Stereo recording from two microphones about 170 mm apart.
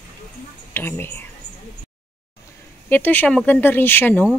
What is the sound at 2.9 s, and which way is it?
Speech, 10° left (ahead or behind).